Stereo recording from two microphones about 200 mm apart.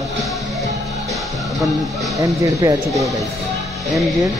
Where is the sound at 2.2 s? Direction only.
15° right (ahead or behind).